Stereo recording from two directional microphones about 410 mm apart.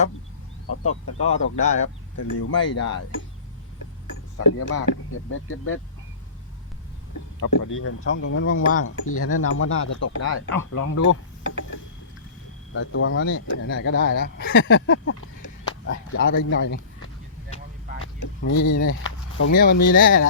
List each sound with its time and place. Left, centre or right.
0.9 s speech: left
1.5 s speech: centre
2.1 s speech: left
4.4 s speech: left
7.3 s speech: left
12.7 s speech: left
18.5 s speech: left
18.8 s speech: left